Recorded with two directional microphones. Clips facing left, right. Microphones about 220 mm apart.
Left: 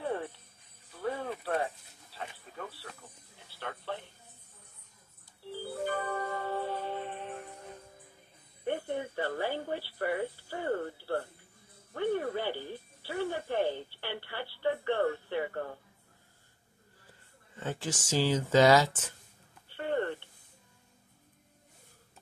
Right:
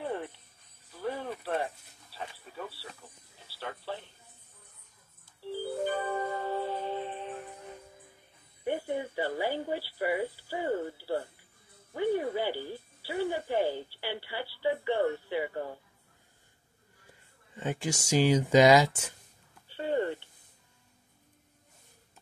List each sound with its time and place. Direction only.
0.0 s music: centre (ahead or behind)
0.9 s cricket: 5° right (ahead or behind)
3.4 s a sound: 5° right (ahead or behind)
5.9 s music: 20° right (ahead or behind)
8.6 s speech: 10° right (ahead or behind)
11.9 s music: 10° right (ahead or behind)
13.0 s telephone: 10° right (ahead or behind)
17.6 s speech: 15° right (ahead or behind)
19.8 s a sound: 10° right (ahead or behind)